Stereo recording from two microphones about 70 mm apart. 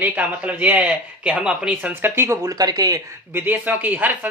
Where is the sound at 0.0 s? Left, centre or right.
Right.